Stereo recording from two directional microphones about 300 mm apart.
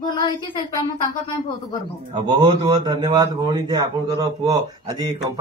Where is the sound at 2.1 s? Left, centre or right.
Centre.